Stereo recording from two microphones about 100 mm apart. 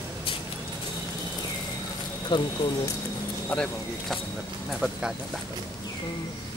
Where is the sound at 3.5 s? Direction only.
5° left (ahead or behind).